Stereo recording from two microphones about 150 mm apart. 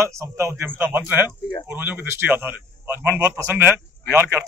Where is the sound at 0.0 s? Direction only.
20° right (ahead or behind).